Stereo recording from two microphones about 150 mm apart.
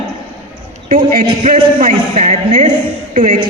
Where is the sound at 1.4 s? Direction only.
50° right (ahead or behind).